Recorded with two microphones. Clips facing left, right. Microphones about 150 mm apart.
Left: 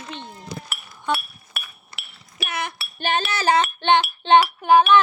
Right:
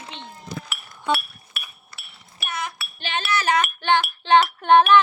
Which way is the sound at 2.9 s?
45° left (ahead or behind).